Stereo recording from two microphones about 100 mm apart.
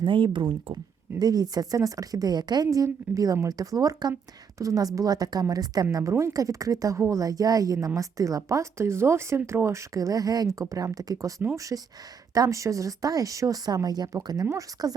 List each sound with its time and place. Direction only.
0.0 s speech: 55° right (ahead or behind)
1.2 s a woman's voice: 40° right (ahead or behind)